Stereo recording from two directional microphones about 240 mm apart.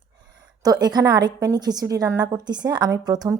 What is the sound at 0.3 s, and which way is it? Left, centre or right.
A woman's voice, centre.